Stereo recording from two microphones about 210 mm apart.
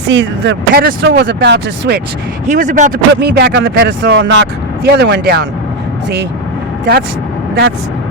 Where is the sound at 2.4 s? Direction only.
35° right (ahead or behind).